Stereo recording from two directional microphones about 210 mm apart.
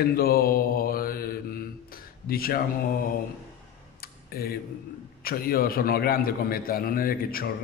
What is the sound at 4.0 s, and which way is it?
Tick-tock, 45° left (ahead or behind).